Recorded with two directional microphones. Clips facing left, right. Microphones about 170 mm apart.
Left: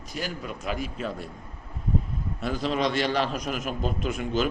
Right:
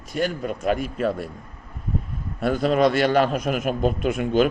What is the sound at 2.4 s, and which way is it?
A man's voice, 55° right (ahead or behind).